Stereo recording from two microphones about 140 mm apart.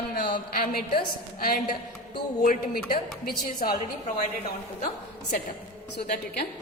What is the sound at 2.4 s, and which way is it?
A woman's voice, 80° left.